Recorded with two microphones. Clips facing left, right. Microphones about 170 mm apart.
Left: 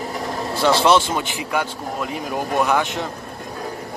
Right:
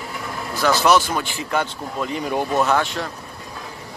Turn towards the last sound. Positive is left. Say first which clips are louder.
# even
turn(degrees=15)  # may be behind; listen again after turning